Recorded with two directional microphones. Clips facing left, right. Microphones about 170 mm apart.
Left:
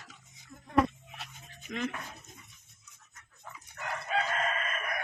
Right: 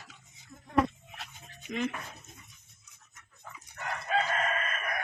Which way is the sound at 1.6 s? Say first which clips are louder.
Right 2 dB; 5° right (ahead or behind).